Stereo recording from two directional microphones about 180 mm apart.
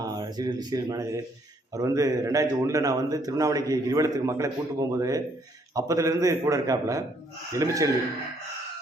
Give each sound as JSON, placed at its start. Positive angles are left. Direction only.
{"t": 0.0, "sound": "a man's voice", "side_deg": -20}